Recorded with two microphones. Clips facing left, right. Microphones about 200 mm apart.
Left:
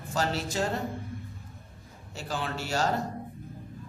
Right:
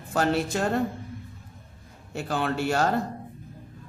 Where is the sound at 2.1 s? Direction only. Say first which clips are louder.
Right 7 dB; 55° right (ahead or behind).